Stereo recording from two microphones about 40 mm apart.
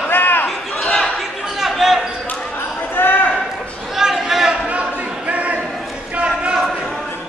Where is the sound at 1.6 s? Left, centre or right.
Centre.